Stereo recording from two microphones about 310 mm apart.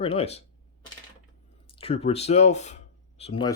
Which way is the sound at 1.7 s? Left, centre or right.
Centre.